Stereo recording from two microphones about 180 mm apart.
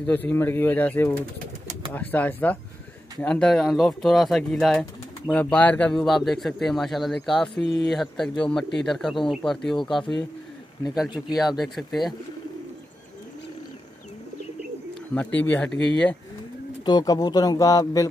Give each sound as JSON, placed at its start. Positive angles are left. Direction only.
{"t": 0.0, "sound": "speech", "side_deg": 10}
{"t": 11.0, "sound": "speech", "side_deg": -5}
{"t": 15.1, "sound": "speech", "side_deg": 10}
{"t": 16.8, "sound": "a man's voice", "side_deg": 20}